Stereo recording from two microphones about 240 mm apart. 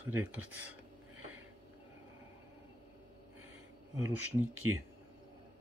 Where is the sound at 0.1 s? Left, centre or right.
Centre.